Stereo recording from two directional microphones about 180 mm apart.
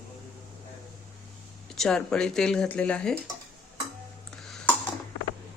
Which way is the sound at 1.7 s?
5° left (ahead or behind).